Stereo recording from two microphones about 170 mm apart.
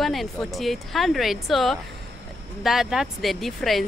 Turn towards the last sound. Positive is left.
turn(degrees=0)  # may be behind; listen again after turning